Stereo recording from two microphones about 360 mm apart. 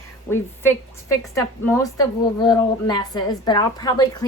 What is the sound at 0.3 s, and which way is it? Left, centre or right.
A woman's voice, centre.